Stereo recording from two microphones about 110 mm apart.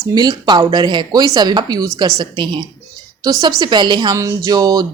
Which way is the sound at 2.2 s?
45° right (ahead or behind).